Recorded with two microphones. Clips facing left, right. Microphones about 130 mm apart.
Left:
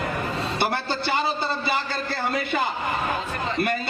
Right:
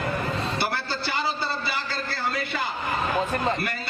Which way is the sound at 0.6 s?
20° left (ahead or behind).